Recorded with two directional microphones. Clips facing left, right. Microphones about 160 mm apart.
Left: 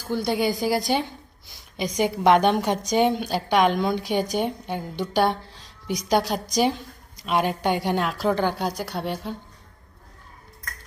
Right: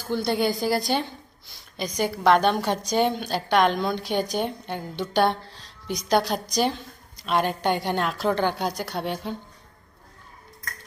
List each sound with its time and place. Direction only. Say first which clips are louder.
0.0 s a woman's voice: even; 10° left (ahead or behind)
5.1 s a sound: even; 10° left (ahead or behind)
6.0 s a woman's voice: even; 10° left (ahead or behind)